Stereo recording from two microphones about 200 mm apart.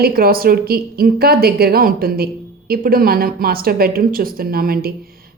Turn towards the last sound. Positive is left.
turn(degrees=-50)  # may be behind; listen again after turning